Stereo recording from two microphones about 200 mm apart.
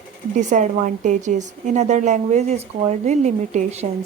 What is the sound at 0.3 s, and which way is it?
A woman's voice, 40° right (ahead or behind).